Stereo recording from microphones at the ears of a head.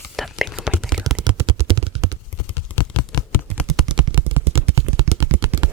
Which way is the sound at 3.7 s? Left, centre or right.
Right.